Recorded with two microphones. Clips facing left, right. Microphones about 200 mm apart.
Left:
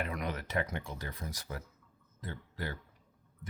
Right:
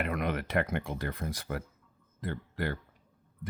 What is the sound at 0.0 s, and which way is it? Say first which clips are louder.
Speech: right 5 dB; 60° right (ahead or behind).